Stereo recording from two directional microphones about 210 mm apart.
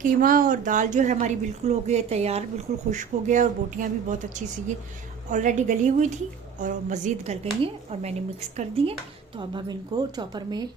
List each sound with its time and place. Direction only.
0.0 s a woman's voice: 40° right (ahead or behind); by 10.7 s 20° right (ahead or behind)